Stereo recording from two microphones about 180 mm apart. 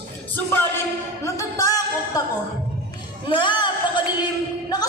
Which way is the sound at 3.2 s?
25° left (ahead or behind).